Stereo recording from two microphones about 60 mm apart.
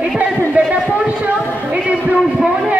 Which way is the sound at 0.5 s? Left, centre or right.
Right.